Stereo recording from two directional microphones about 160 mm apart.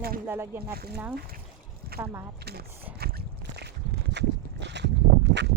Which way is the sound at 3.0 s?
80° right.